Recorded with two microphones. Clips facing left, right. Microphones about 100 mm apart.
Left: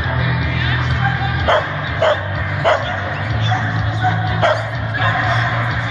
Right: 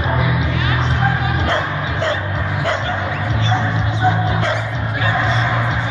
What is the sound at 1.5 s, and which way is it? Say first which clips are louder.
Bow-wow: left 3 dB; 55° left (ahead or behind).